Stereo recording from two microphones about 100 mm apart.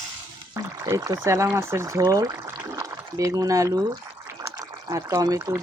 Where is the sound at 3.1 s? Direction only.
35° right (ahead or behind).